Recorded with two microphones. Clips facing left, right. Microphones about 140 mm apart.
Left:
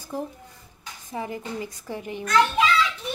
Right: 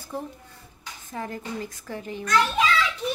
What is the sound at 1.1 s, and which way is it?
A woman's voice, 15° left (ahead or behind).